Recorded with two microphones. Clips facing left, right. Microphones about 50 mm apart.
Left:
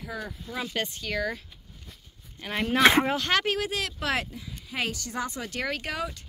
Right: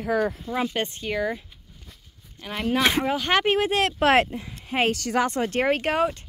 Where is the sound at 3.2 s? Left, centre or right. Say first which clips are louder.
Right 5 dB; right.